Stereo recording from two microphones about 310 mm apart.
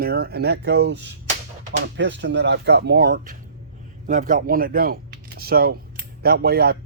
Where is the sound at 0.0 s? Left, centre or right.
Right.